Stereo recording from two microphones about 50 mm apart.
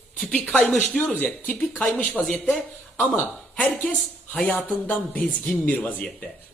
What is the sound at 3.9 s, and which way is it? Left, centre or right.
Speech, centre.